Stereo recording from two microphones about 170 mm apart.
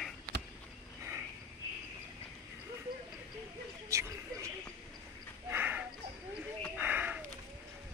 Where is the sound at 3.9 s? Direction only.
20° right (ahead or behind).